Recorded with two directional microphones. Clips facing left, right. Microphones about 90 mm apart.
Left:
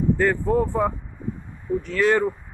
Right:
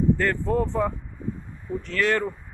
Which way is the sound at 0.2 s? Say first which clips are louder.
Left 3 dB; 10° left (ahead or behind).